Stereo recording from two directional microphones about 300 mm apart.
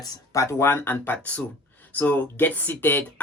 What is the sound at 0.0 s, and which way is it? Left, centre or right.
Speech, centre.